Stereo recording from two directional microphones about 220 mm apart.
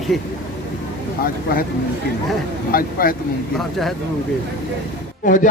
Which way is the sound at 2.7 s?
40° left (ahead or behind).